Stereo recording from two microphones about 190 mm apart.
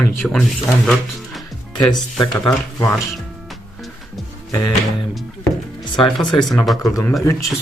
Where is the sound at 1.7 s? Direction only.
25° left (ahead or behind).